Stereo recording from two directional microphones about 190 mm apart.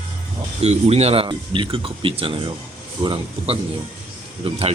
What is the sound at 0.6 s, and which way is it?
Speech, 35° right (ahead or behind).